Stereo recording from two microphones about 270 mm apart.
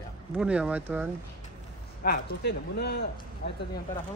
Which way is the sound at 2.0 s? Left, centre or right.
Left.